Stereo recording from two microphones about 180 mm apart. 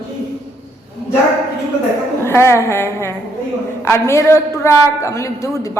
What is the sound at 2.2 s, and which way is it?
A man's voice, 15° left (ahead or behind).